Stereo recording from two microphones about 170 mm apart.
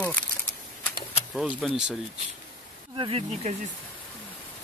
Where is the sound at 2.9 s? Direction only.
30° right (ahead or behind).